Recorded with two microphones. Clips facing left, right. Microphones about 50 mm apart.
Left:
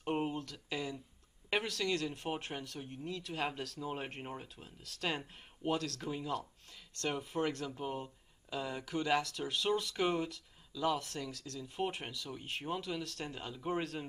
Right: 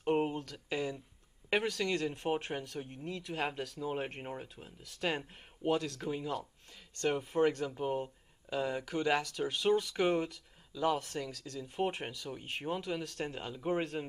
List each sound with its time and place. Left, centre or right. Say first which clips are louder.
0.0 s a sound: right 4 dB; centre
0.7 s speech: right 5 dB; centre
2.6 s speech: right 2 dB; right
13.7 s speech: right 3 dB; right